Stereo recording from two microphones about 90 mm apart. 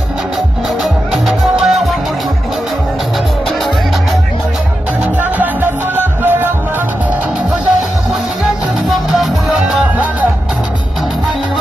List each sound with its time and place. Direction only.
1.1 s music: centre (ahead or behind)
5.4 s music: 20° right (ahead or behind)
8.9 s music: centre (ahead or behind)